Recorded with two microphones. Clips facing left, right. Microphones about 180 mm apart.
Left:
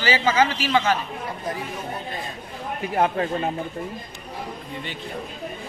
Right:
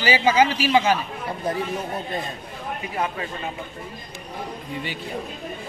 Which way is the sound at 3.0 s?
45° left (ahead or behind).